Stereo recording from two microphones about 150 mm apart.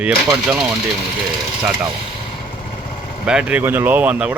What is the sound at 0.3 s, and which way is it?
Speech, centre (ahead or behind).